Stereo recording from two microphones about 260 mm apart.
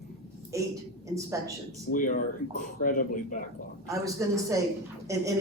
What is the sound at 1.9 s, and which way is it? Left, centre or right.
Speech, left.